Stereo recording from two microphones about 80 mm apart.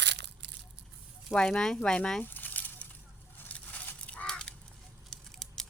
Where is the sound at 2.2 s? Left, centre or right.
Left.